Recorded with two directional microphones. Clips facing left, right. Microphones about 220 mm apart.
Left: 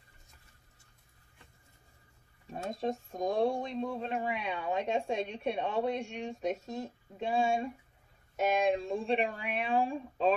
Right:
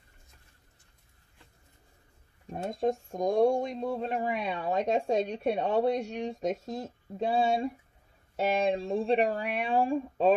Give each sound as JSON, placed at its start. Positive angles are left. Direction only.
{"t": 2.5, "sound": "speech", "side_deg": -50}